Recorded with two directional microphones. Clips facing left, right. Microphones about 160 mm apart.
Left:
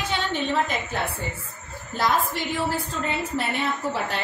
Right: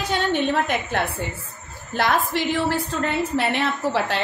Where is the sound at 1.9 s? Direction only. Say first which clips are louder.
Right 2 dB; 70° right (ahead or behind).